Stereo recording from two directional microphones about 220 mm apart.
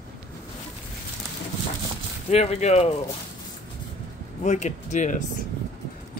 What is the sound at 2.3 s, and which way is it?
Speech, 30° left (ahead or behind).